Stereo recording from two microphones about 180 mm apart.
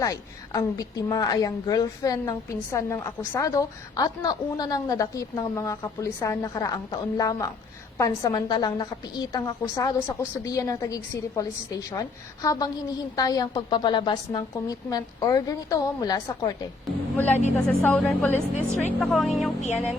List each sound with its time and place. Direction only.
0.0 s a woman's voice: 20° left (ahead or behind)
17.2 s speech: 10° left (ahead or behind)
19.6 s music: 40° left (ahead or behind)